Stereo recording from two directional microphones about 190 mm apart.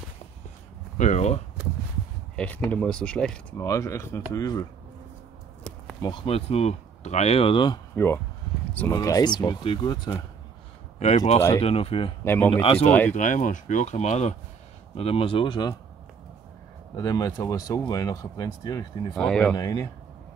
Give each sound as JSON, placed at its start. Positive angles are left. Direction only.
{"t": 0.9, "sound": "speech", "side_deg": 40}
{"t": 2.3, "sound": "speech", "side_deg": 5}
{"t": 3.5, "sound": "speech", "side_deg": 15}
{"t": 5.7, "sound": "a sound", "side_deg": 10}
{"t": 6.0, "sound": "speech", "side_deg": 25}
{"t": 7.9, "sound": "speech", "side_deg": 10}
{"t": 11.0, "sound": "speech", "side_deg": 35}
{"t": 12.3, "sound": "speech", "side_deg": 10}
{"t": 13.1, "sound": "speech", "side_deg": 40}
{"t": 16.9, "sound": "speech", "side_deg": 20}
{"t": 19.1, "sound": "speech", "side_deg": 5}
{"t": 19.5, "sound": "speech", "side_deg": 20}